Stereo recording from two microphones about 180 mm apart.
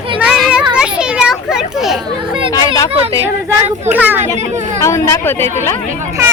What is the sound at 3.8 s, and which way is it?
Speech, 10° right (ahead or behind).